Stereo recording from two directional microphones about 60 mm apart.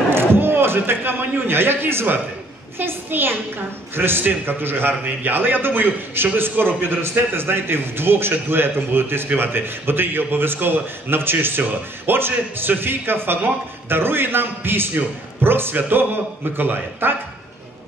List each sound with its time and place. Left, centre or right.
0.1 s a man's voice: right